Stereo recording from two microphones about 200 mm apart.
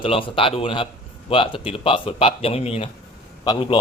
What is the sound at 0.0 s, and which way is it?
Speech, 25° left (ahead or behind).